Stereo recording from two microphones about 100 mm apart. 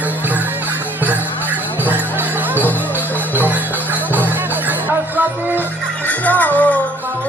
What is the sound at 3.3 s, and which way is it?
Music, 20° right (ahead or behind).